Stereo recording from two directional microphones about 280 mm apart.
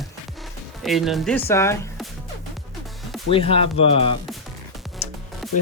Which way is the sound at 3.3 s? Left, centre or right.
Centre.